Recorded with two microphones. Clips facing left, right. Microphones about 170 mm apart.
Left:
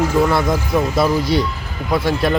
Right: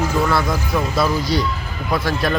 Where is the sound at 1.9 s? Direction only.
20° left (ahead or behind).